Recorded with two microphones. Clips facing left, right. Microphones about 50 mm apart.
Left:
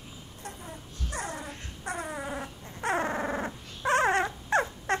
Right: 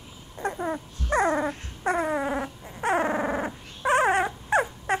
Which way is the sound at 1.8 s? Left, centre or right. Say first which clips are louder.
Right 10 dB; right.